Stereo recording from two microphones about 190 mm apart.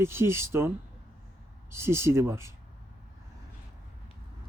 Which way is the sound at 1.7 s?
15° right (ahead or behind).